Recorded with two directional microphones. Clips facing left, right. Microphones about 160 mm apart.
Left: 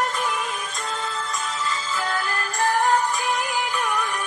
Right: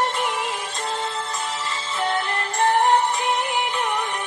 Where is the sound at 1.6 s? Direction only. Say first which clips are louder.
Right 3 dB; 25° right (ahead or behind).